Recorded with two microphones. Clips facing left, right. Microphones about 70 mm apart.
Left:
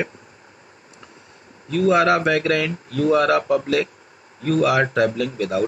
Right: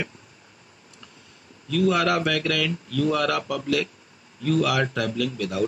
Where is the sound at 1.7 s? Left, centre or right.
Left.